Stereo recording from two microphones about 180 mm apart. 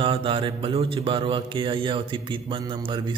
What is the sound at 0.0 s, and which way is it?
A man's voice, 30° right (ahead or behind).